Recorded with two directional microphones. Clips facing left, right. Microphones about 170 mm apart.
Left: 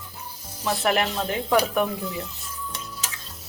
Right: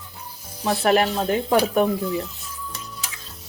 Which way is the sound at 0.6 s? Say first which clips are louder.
Right 4 dB; 40° right (ahead or behind).